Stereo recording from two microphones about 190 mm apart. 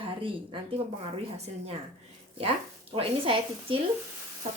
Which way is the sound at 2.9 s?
30° right (ahead or behind).